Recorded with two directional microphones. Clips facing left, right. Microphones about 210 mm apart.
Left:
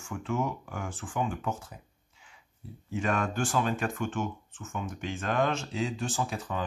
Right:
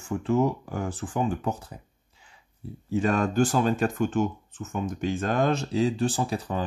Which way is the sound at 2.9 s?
35° right (ahead or behind).